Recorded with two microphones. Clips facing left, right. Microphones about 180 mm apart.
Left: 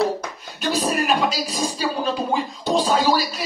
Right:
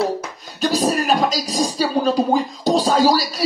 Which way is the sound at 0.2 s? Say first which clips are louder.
Right 5 dB; 40° right (ahead or behind).